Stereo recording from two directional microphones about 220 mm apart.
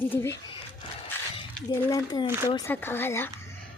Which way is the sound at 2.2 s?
10° right (ahead or behind).